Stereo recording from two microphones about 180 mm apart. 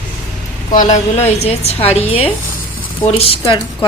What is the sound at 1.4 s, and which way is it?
A woman's voice, 35° left (ahead or behind).